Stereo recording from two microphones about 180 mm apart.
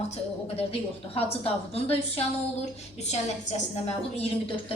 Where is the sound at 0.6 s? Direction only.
35° left (ahead or behind).